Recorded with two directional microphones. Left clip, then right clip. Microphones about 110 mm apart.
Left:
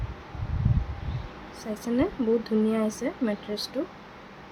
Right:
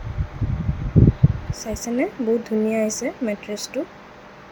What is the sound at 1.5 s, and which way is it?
Speech, 20° right (ahead or behind).